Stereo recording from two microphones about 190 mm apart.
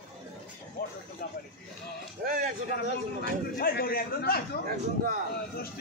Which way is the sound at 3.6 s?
50° left (ahead or behind).